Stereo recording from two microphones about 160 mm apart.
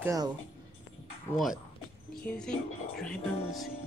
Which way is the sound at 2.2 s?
5° left (ahead or behind).